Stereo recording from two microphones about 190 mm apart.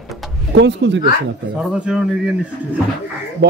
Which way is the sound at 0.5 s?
65° right (ahead or behind).